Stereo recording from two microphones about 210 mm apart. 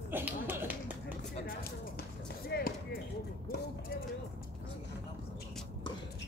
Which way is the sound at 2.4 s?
45° left (ahead or behind).